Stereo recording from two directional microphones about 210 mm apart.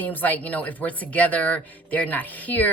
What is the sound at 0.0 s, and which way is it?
A woman's voice, 10° left (ahead or behind).